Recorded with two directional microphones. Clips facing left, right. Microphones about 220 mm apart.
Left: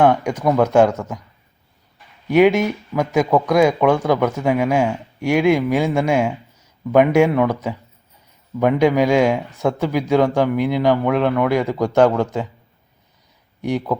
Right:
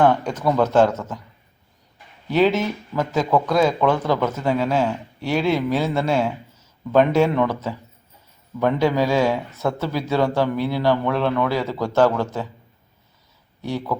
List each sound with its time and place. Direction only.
0.0 s speech: 15° left (ahead or behind)
2.3 s speech: 15° left (ahead or behind)
13.6 s speech: 15° left (ahead or behind)